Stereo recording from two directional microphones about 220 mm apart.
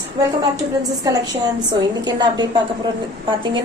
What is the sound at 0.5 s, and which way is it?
A woman's voice, 15° right (ahead or behind).